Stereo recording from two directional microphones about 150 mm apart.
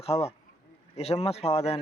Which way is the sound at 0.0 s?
45° left (ahead or behind).